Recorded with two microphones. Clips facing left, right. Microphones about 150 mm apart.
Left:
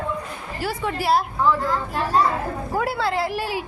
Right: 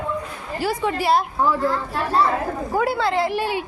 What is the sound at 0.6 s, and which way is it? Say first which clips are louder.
Speech: right 4 dB; centre (ahead or behind).